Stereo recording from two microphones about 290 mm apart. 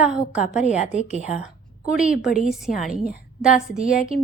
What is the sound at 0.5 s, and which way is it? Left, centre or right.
Speech, left.